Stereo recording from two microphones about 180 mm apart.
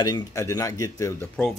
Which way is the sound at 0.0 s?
20° left (ahead or behind).